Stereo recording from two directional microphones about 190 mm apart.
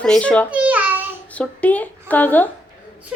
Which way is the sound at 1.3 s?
10° left (ahead or behind).